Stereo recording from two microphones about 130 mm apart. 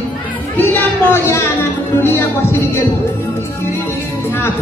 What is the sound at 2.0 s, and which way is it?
Music, 20° left (ahead or behind).